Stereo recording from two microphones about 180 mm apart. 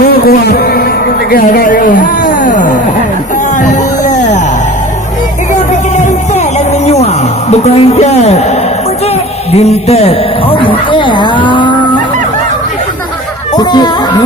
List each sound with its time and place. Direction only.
0.0 s music: 55° left (ahead or behind)
1.3 s speech: 55° left (ahead or behind)
3.6 s a sound: 40° left (ahead or behind)
5.5 s music: 40° left (ahead or behind)
7.5 s speech: 35° left (ahead or behind)
9.5 s a man's voice: 35° left (ahead or behind)
13.6 s a man's voice: 25° left (ahead or behind)